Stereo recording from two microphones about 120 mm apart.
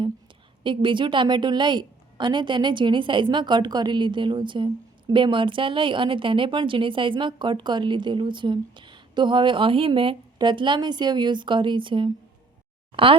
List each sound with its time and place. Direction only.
0.6 s a woman's voice: 45° right (ahead or behind)